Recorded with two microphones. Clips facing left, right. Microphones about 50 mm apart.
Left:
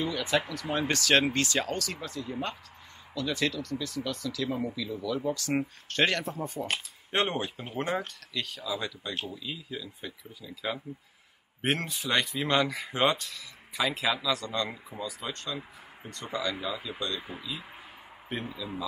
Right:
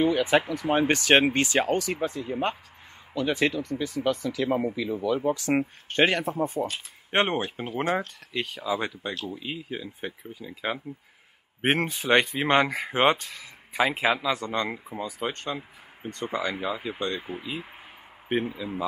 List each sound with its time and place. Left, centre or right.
0.0 s speech: right
7.1 s speech: right